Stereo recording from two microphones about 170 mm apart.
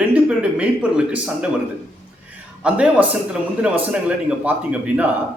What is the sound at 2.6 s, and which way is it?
A man's voice, 5° right (ahead or behind).